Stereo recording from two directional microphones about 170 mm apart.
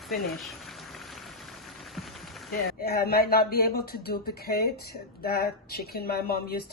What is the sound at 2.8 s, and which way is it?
Speech, 65° left (ahead or behind).